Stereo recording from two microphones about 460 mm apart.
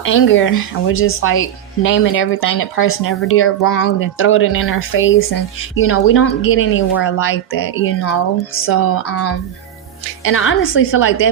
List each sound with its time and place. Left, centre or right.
0.0 s speech: left